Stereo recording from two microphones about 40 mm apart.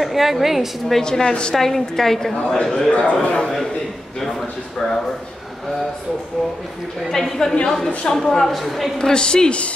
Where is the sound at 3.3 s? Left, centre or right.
Centre.